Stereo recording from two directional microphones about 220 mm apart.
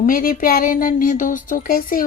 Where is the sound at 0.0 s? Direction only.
40° left (ahead or behind).